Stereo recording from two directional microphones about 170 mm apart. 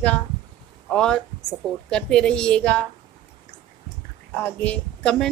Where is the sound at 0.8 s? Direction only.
5° left (ahead or behind).